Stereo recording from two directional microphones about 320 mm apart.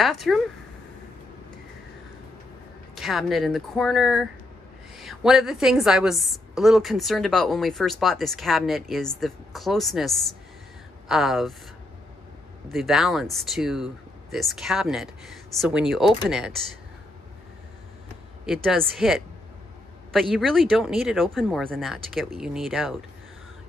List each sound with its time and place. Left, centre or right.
0.0 s a woman's voice: centre
2.9 s a woman's voice: centre
12.6 s a woman's voice: centre
18.4 s a woman's voice: centre